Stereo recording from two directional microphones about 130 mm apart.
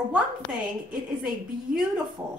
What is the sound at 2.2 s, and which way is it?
Speech, 15° right (ahead or behind).